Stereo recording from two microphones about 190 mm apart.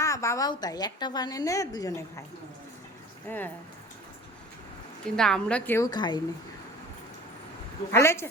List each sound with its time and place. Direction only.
0.0 s a woman's voice: 15° left (ahead or behind)
3.2 s a woman's voice: 10° left (ahead or behind)
5.1 s a woman's voice: 5° left (ahead or behind); by 6.2 s 20° left (ahead or behind)
7.9 s a woman's voice: 15° left (ahead or behind)